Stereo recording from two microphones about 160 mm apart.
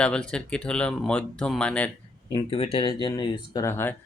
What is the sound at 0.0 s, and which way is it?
Speech, 5° left (ahead or behind).